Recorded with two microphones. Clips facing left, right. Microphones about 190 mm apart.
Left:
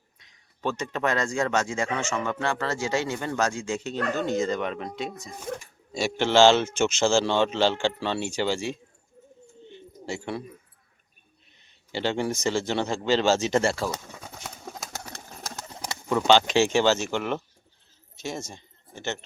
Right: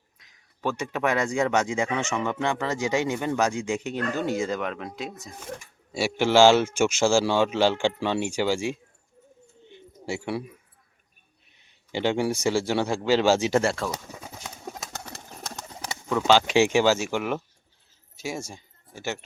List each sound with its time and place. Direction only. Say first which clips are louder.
0.2 s speech: right 1 dB; 5° right (ahead or behind)
9.6 s bird: right 2 dB; 15° right (ahead or behind)
11.5 s speech: right 2 dB; 15° right (ahead or behind)
14.2 s clip-clop: right 1 dB; 5° right (ahead or behind)
15.9 s speech: left 1 dB; centre (ahead or behind)